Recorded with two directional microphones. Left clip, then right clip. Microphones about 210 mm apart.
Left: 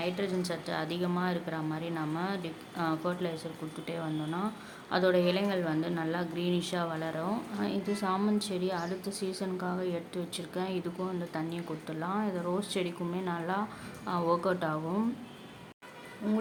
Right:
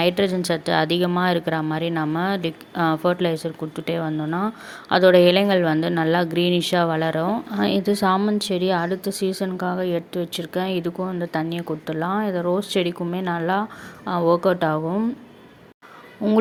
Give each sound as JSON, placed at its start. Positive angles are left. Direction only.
{"t": 0.0, "sound": "a woman's voice", "side_deg": -40}
{"t": 16.2, "sound": "a woman's voice", "side_deg": -35}